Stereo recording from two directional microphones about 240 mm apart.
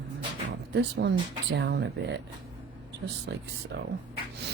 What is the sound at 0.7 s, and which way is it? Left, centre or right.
Speech, right.